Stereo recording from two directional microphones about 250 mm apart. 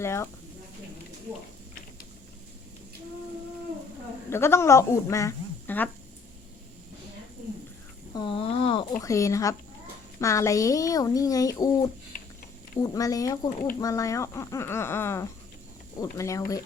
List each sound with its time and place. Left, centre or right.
0.0 s speech: centre
4.3 s speech: centre
8.1 s speech: centre